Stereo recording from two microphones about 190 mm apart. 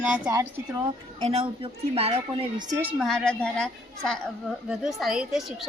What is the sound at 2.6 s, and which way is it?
Speech, 15° right (ahead or behind).